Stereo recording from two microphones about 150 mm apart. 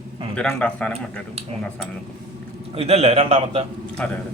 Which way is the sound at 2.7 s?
40° right (ahead or behind).